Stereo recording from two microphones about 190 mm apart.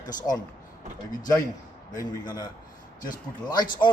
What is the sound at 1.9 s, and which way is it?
Speech, 20° left (ahead or behind).